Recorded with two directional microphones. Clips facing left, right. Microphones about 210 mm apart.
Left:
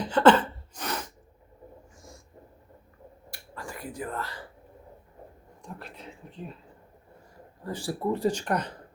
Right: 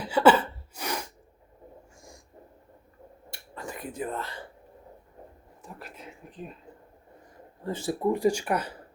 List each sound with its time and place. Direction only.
0.0 s a sound: 10° right (ahead or behind)
3.2 s finger snapping: 25° right (ahead or behind)
5.6 s speech: 5° right (ahead or behind)
7.6 s speech: 25° right (ahead or behind); by 8.8 s 5° right (ahead or behind)